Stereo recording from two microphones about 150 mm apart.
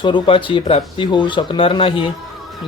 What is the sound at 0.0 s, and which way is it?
Speech, 35° left (ahead or behind).